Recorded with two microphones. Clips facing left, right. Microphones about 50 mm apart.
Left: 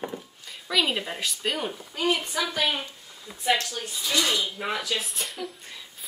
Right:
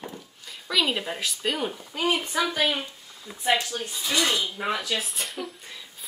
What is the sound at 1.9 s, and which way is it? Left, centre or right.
Speech, centre.